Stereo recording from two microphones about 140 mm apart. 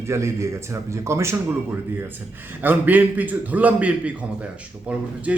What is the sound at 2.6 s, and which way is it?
A man's voice, 10° right (ahead or behind).